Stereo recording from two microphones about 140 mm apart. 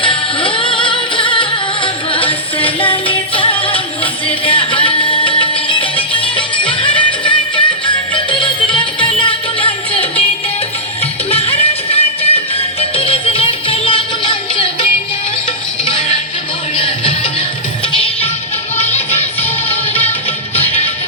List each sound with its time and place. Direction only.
0.0 s music: 40° left (ahead or behind)
11.3 s music: 45° left (ahead or behind)
15.9 s music: 40° left (ahead or behind)